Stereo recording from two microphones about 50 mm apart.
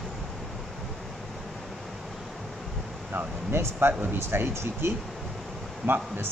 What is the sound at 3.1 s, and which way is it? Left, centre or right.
Speech, right.